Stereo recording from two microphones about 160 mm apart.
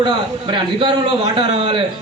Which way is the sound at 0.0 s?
25° right (ahead or behind).